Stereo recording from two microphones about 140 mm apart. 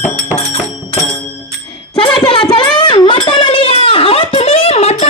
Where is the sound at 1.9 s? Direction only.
35° left (ahead or behind).